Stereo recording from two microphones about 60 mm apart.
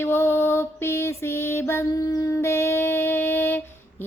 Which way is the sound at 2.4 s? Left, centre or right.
Left.